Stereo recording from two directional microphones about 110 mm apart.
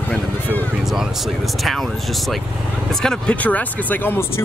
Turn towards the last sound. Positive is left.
turn(degrees=20)  # may be behind; listen again after turning